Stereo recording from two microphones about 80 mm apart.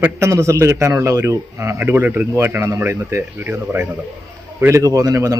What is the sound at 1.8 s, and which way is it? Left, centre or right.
Speech, right.